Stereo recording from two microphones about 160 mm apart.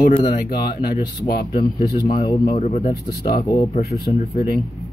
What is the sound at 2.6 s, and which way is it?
Speech, 45° left (ahead or behind).